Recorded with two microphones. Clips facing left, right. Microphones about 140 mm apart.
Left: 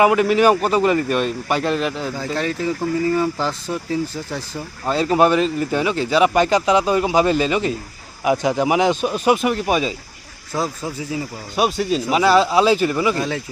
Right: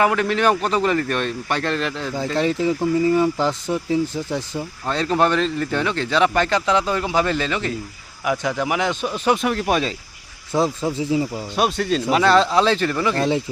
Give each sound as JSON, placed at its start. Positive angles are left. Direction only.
{"t": 0.0, "sound": "a man's voice", "side_deg": 10}
{"t": 2.1, "sound": "speech", "side_deg": -20}
{"t": 4.9, "sound": "a man's voice", "side_deg": 5}
{"t": 10.5, "sound": "speech", "side_deg": -25}
{"t": 11.5, "sound": "a man's voice", "side_deg": 5}